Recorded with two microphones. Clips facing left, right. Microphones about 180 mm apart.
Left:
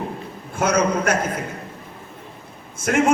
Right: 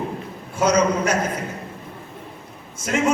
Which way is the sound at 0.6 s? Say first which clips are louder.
Right 1 dB; 55° left (ahead or behind).